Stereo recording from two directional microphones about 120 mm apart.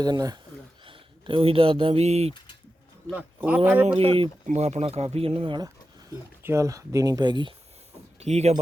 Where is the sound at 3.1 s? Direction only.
15° right (ahead or behind).